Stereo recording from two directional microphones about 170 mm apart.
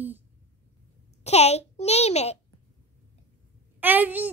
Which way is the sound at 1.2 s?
40° left (ahead or behind).